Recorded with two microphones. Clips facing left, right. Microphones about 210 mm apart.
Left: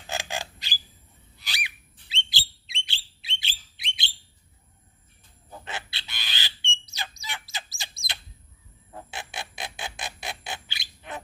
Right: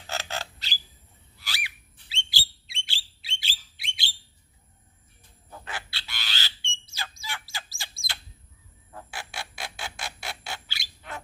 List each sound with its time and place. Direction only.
0.1 s squawk: 15° left (ahead or behind)
1.4 s bird: 20° left (ahead or behind)
5.5 s bird: 20° left (ahead or behind)
8.9 s a sound: 20° left (ahead or behind)